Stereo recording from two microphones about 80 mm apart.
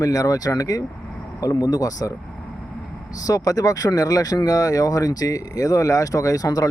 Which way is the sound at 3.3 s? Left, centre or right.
Left.